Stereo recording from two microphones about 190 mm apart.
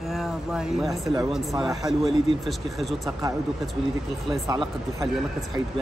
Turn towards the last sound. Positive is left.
turn(degrees=-20)  # may be behind; listen again after turning